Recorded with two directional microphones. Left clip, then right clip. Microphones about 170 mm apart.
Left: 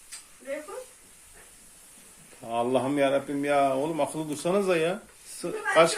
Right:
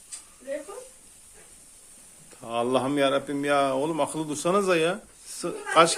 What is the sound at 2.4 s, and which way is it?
Speech, 10° right (ahead or behind).